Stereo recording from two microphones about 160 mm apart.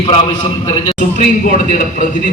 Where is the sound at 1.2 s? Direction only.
55° left (ahead or behind).